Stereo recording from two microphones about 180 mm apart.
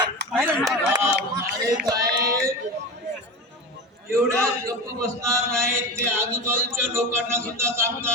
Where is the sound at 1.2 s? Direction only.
70° right (ahead or behind).